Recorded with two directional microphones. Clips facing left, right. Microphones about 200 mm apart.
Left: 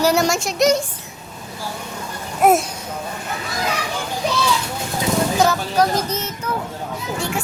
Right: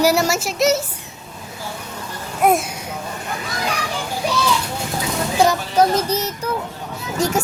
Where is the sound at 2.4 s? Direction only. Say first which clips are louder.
Left 2 dB; centre (ahead or behind).